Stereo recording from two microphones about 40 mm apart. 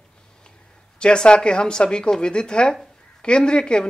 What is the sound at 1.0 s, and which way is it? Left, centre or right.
Speech, left.